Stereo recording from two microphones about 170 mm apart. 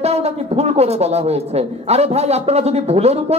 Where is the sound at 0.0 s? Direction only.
40° right (ahead or behind).